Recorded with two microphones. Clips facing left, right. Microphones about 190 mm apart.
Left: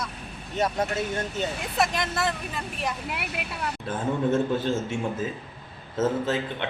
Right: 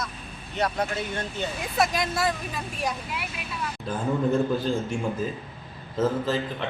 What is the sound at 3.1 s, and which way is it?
Speech, 65° left (ahead or behind).